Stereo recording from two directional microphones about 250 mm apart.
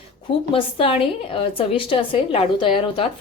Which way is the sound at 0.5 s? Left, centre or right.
Left.